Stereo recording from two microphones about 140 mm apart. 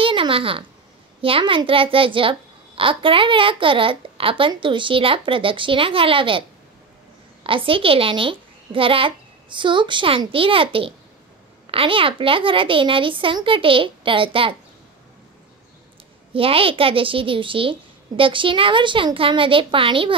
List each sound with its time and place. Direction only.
0.0 s a sound: 40° right (ahead or behind)
1.2 s a child's voice: 40° right (ahead or behind)
7.4 s a child's voice: 40° right (ahead or behind)
16.3 s a child's voice: 40° right (ahead or behind)